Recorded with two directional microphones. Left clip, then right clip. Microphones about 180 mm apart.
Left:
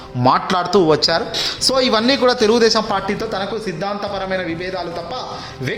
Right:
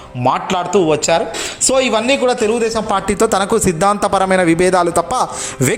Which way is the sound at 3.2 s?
40° right (ahead or behind).